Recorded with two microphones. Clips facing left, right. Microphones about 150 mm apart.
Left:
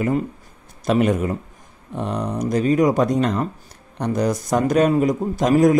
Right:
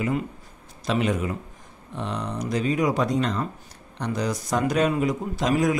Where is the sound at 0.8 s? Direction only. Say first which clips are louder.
Left 6 dB; 50° left (ahead or behind).